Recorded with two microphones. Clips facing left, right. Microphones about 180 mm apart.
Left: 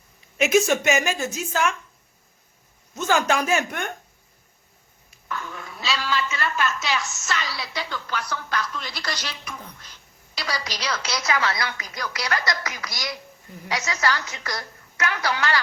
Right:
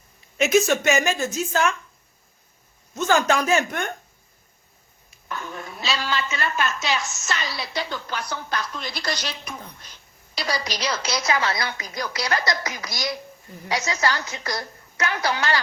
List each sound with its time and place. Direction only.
0.3 s a woman's voice: 5° left (ahead or behind)
3.1 s a woman's voice: 10° left (ahead or behind)
5.3 s a woman's voice: 20° right (ahead or behind)
10.8 s a woman's voice: 20° right (ahead or behind)